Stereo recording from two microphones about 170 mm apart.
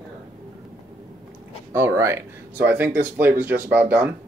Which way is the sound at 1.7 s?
15° right (ahead or behind).